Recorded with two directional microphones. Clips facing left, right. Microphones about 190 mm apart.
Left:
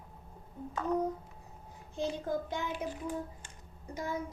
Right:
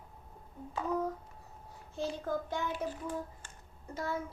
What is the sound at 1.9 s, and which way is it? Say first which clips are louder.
Speech: left 1 dB; 15° left (ahead or behind).